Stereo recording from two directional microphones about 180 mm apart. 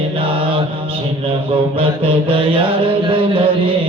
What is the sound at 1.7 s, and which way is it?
Mantra, 30° right (ahead or behind).